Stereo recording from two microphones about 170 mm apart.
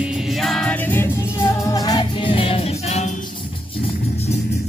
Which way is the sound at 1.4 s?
20° left (ahead or behind).